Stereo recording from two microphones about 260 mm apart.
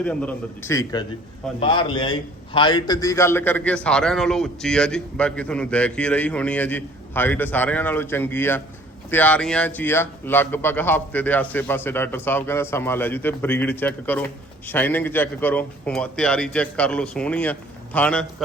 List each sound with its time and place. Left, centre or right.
0.0 s a man's voice: centre